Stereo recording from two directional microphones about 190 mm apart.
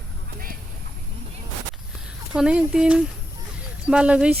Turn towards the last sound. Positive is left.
turn(degrees=-5)  # may be behind; listen again after turning